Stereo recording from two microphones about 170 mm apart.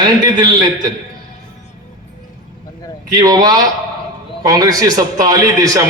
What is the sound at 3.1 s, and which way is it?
A man's voice, 20° right (ahead or behind).